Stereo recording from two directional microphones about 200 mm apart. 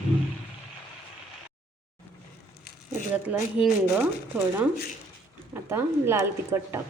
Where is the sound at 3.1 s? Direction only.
5° right (ahead or behind).